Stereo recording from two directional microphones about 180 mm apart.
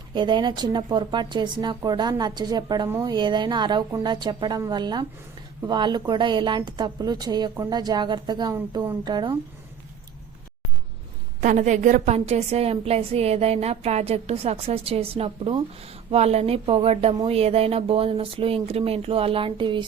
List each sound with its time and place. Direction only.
0.1 s a woman's voice: 25° right (ahead or behind)
11.3 s a woman's voice: 45° right (ahead or behind); by 19.8 s 25° right (ahead or behind)